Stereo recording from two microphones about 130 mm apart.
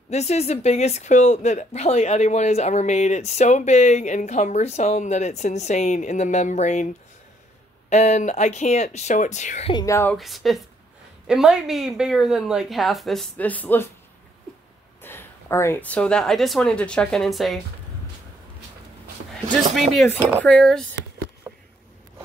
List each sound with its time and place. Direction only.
0.1 s a woman's voice: 55° left (ahead or behind)
7.9 s a woman's voice: 65° left (ahead or behind)
9.8 s speech: 25° left (ahead or behind)
10.1 s a woman's voice: centre (ahead or behind)
13.4 s speech: 10° left (ahead or behind)
15.0 s speech: 15° left (ahead or behind); by 17.6 s centre (ahead or behind)
19.3 s speech: 5° left (ahead or behind)